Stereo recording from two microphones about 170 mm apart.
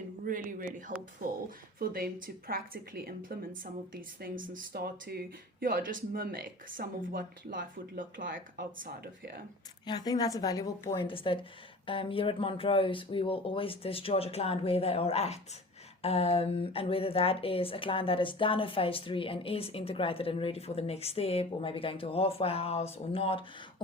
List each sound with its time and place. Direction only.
0.3 s speech: 50° right (ahead or behind)
9.8 s a woman's voice: 25° left (ahead or behind)